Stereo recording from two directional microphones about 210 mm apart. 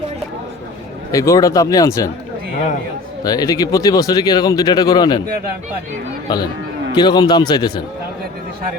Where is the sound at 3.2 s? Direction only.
20° left (ahead or behind).